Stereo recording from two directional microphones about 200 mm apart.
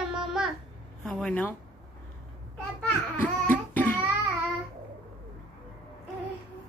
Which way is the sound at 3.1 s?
10° left (ahead or behind).